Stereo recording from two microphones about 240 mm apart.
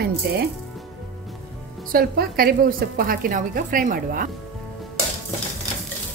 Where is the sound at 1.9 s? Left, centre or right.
Right.